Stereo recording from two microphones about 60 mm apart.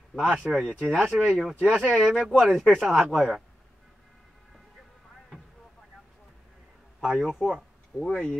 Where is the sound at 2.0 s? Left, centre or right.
Centre.